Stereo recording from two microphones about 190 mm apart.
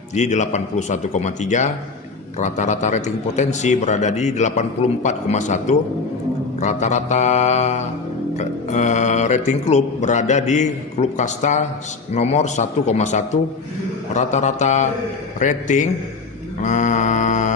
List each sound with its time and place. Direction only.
0.1 s a man's voice: 40° left (ahead or behind)